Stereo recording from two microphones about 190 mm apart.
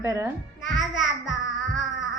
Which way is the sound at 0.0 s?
15° right (ahead or behind).